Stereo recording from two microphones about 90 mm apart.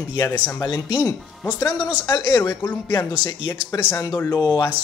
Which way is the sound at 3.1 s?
55° left (ahead or behind).